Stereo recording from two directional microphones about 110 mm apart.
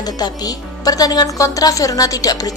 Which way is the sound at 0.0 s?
35° left (ahead or behind).